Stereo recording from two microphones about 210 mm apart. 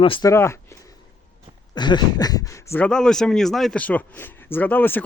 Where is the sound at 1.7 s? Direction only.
20° left (ahead or behind).